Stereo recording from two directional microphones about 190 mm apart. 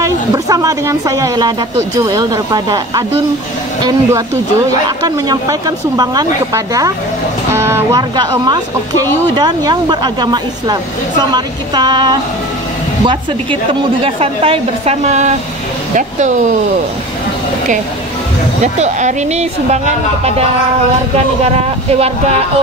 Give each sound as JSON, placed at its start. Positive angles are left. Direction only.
{"t": 0.0, "sound": "a woman's voice", "side_deg": -15}
{"t": 18.6, "sound": "a woman's voice", "side_deg": -40}
{"t": 21.5, "sound": "a woman's voice", "side_deg": -35}